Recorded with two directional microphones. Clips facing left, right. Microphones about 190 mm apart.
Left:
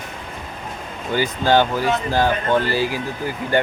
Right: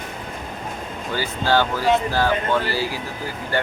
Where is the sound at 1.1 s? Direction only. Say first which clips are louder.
Left 4 dB; 20° left (ahead or behind).